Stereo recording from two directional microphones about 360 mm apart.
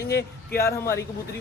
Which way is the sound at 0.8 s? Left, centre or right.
Centre.